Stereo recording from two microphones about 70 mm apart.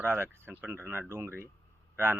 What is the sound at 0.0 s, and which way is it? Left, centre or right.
A man's voice, right.